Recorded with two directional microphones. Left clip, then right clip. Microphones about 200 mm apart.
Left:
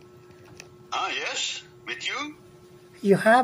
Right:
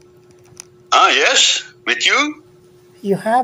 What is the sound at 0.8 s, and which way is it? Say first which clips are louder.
Speech: right 17 dB; 40° right (ahead or behind).